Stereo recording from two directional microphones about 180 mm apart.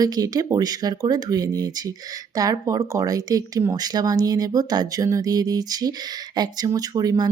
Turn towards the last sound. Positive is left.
turn(degrees=-20)  # may be behind; listen again after turning